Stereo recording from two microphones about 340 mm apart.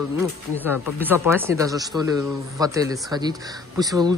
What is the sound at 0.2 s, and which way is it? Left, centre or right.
Speech, centre.